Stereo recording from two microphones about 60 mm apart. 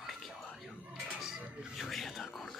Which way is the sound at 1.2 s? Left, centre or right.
Centre.